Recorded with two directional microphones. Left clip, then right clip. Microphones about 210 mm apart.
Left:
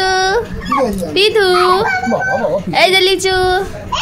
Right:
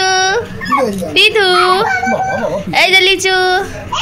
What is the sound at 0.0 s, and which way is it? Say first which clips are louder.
Dog: right 1 dB; 20° left (ahead or behind).